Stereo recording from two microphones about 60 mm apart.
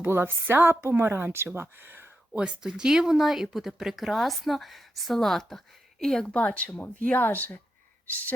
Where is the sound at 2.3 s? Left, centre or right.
Centre.